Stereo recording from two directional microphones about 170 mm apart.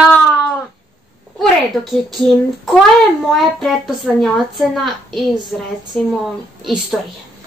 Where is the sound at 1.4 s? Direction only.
Centre (ahead or behind).